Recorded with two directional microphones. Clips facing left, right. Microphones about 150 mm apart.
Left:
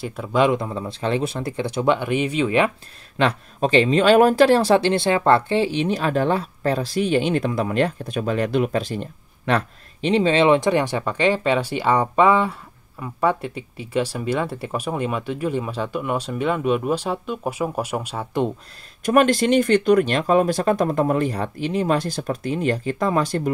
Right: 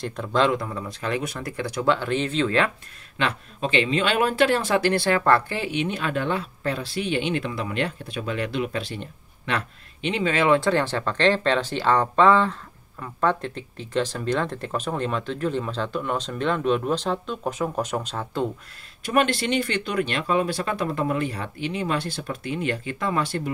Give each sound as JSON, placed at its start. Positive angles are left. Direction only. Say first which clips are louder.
{"t": 0.0, "sound": "speech", "louder": "left 3 dB", "side_deg": 5}
{"t": 3.2, "sound": "speech", "louder": "left 6 dB", "side_deg": 40}
{"t": 19.0, "sound": "speech", "louder": "left 6 dB", "side_deg": 45}